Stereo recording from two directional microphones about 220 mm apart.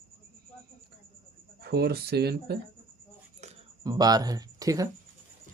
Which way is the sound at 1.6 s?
45° right (ahead or behind).